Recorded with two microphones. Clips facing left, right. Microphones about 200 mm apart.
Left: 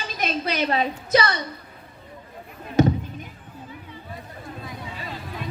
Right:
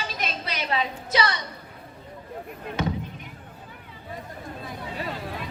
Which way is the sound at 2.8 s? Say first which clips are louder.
Left 10 dB; 45° left (ahead or behind).